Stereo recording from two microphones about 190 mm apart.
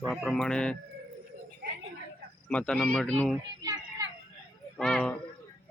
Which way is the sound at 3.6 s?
20° right (ahead or behind).